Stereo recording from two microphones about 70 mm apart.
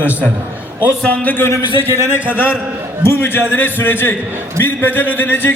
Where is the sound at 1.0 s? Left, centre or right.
Left.